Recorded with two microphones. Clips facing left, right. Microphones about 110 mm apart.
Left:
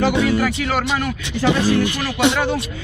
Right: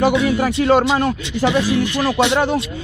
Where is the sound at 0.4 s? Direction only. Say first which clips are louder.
Right 6 dB; 30° right (ahead or behind).